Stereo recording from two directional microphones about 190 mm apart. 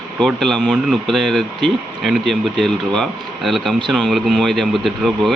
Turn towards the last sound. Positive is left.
turn(degrees=0)  # may be behind; listen again after turning